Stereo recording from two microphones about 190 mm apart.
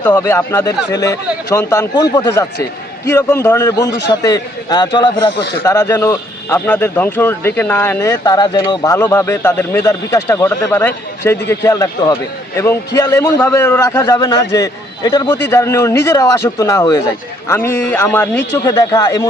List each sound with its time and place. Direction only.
0.0 s a man's voice: 10° left (ahead or behind)
5.4 s speech: 60° left (ahead or behind)
5.6 s a man's voice: 15° left (ahead or behind)
18.6 s a man's voice: 20° left (ahead or behind)